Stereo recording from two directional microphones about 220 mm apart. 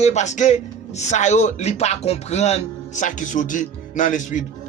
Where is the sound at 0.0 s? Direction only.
30° left (ahead or behind).